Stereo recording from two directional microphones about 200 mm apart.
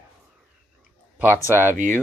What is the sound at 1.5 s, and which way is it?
Speech, 10° right (ahead or behind).